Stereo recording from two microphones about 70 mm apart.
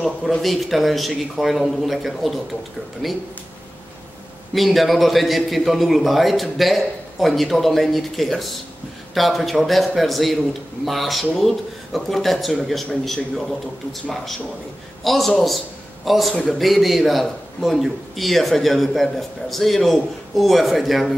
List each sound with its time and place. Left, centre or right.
0.0 s a man's voice: centre
4.6 s a man's voice: centre